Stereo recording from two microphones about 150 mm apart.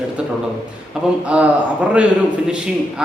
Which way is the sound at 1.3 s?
10° right (ahead or behind).